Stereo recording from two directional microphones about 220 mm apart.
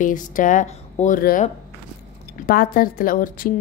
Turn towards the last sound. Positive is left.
turn(degrees=40)  # may be behind; listen again after turning